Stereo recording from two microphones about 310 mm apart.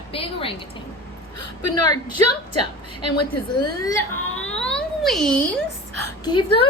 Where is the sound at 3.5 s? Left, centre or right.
Centre.